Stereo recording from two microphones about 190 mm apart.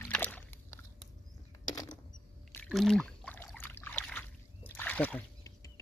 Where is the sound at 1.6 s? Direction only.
20° left (ahead or behind).